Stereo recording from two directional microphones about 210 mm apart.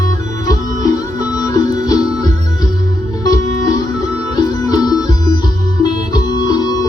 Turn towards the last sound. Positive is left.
turn(degrees=20)  # may be behind; listen again after turning